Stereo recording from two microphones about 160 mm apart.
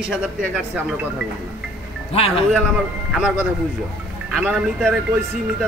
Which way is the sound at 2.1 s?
35° left (ahead or behind).